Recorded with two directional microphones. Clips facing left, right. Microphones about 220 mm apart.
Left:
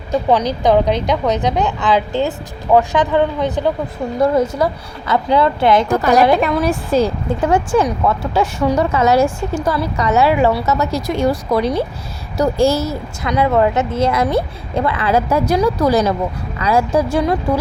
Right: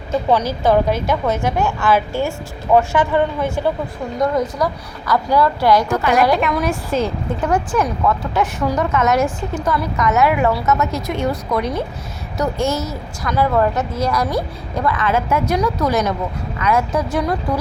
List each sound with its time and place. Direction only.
0.3 s a woman's voice: 15° left (ahead or behind)
4.2 s a woman's voice: 25° left (ahead or behind)
5.9 s a woman's voice: 40° left (ahead or behind)